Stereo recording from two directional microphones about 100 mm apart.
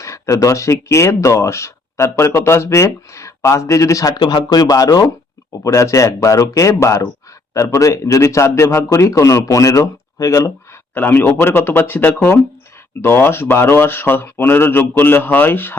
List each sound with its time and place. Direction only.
0.0 s a sound: 30° left (ahead or behind)
0.3 s speech: 30° left (ahead or behind)
4.2 s speech: 50° left (ahead or behind); by 10.5 s 35° left (ahead or behind)
10.9 s speech: 20° left (ahead or behind)